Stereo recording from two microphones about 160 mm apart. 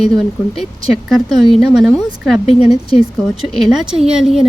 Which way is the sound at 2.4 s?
40° left (ahead or behind).